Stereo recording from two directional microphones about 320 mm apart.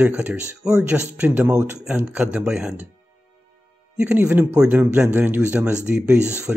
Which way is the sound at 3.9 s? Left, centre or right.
Centre.